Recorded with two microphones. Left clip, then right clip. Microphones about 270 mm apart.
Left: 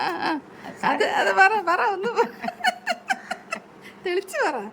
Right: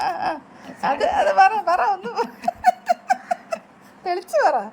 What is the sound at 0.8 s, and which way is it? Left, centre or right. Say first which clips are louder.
Laughter: right 2 dB; centre.